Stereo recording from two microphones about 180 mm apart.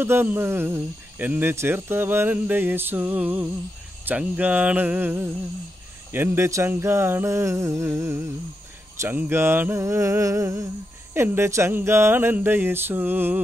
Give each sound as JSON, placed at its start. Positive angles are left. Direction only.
{"t": 0.0, "sound": "speech", "side_deg": -10}